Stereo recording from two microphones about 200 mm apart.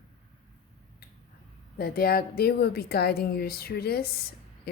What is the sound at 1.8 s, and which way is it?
A woman's voice, 50° left (ahead or behind).